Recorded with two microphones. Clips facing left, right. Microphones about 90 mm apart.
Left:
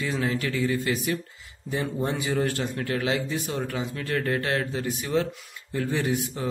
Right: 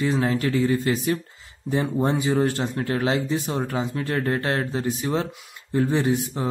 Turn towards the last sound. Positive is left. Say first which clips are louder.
# right 5 dB
turn(degrees=-30)  # may be behind; listen again after turning